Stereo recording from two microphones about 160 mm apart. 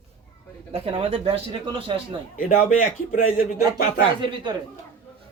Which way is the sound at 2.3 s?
55° left (ahead or behind).